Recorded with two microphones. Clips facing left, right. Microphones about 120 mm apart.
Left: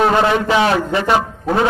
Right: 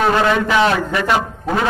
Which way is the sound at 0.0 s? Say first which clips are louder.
Left 1 dB; 25° left (ahead or behind).